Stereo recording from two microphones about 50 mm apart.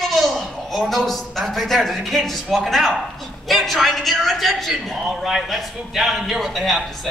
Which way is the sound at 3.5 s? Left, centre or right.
Centre.